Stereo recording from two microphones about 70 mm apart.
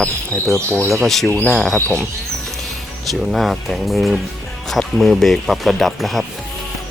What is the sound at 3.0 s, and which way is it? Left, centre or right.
Speech, centre.